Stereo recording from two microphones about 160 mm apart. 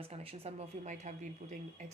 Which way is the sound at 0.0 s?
35° right (ahead or behind).